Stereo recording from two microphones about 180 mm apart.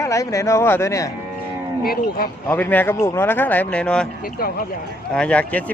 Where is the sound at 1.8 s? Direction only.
55° left (ahead or behind).